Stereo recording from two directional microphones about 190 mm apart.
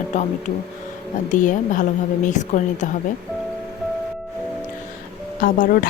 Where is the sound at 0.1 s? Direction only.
40° left (ahead or behind).